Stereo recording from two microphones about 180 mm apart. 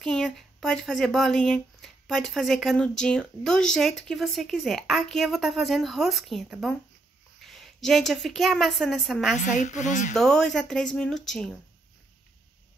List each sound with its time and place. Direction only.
0.0 s a woman's voice: centre (ahead or behind)
9.4 s a woman's voice: 45° left (ahead or behind)
10.1 s speech: 5° left (ahead or behind)